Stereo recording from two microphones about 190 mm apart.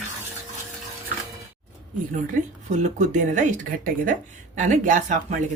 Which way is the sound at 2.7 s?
40° right (ahead or behind).